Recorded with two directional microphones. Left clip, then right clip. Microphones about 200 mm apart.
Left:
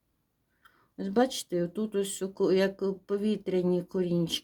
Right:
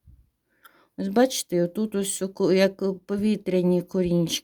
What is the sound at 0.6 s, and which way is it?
Speech, 45° right (ahead or behind).